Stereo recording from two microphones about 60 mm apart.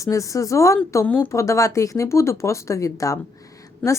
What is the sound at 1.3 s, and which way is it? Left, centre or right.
Speech, left.